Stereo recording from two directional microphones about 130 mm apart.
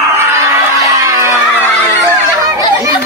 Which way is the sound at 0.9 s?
25° right (ahead or behind).